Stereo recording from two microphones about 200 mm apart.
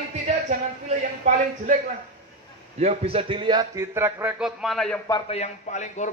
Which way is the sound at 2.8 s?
30° right (ahead or behind).